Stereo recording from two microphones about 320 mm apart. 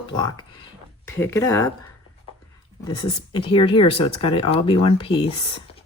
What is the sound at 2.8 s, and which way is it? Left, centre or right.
Speech, centre.